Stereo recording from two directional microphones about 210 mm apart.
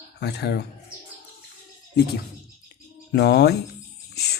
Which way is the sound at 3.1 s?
50° left (ahead or behind).